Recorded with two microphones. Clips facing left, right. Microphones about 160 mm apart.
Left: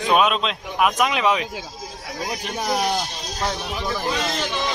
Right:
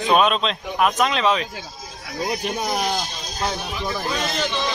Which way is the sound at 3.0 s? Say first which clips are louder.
Even; 75° left (ahead or behind).